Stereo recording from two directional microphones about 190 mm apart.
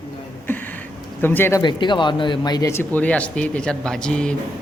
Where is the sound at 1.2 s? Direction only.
10° left (ahead or behind).